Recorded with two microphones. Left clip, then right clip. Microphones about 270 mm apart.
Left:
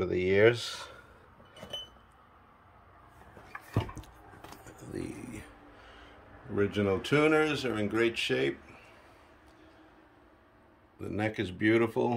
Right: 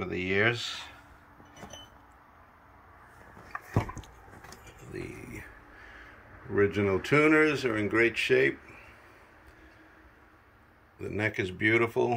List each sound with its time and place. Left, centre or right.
0.0 s speech: centre
4.6 s vehicle: centre
6.5 s speech: centre
11.0 s speech: centre